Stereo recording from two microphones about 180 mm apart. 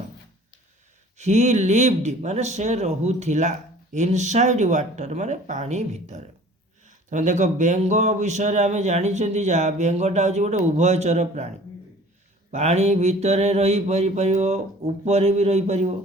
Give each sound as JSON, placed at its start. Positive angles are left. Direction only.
{"t": 1.2, "sound": "a man's voice", "side_deg": -40}